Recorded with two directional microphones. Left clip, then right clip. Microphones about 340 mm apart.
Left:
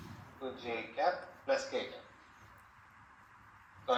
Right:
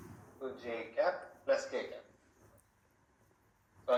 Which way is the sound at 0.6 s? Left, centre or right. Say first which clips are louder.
Even; centre.